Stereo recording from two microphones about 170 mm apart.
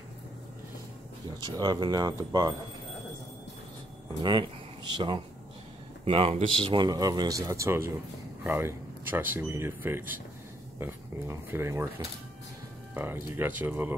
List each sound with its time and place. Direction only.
1.4 s speech: 25° right (ahead or behind)
4.2 s speech: 25° right (ahead or behind); by 13.9 s 10° right (ahead or behind)